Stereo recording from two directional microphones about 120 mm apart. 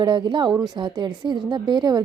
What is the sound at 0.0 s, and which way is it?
A woman's voice, 40° right (ahead or behind).